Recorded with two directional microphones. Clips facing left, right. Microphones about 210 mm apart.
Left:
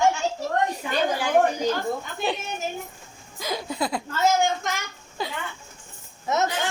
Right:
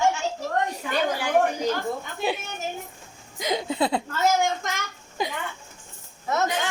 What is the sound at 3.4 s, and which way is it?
Laughter, 20° right (ahead or behind).